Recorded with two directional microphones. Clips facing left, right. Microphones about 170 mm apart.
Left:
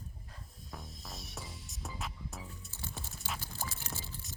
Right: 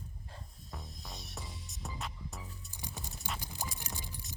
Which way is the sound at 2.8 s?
15° right (ahead or behind).